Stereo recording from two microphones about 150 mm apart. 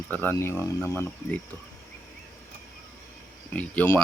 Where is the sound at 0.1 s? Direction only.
15° left (ahead or behind).